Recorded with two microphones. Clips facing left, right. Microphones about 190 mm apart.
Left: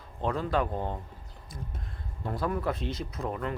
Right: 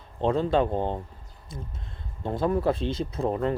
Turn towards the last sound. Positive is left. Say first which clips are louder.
# right 7 dB
turn(degrees=-30)  # may be behind; listen again after turning